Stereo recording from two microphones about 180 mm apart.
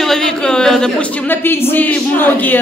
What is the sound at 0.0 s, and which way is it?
A woman's voice, centre (ahead or behind).